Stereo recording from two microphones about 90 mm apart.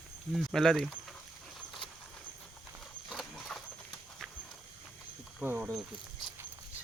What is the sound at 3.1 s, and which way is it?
Horse, centre (ahead or behind).